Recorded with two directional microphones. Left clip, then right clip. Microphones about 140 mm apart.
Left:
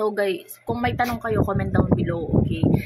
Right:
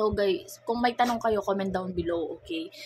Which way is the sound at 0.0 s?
Centre (ahead or behind).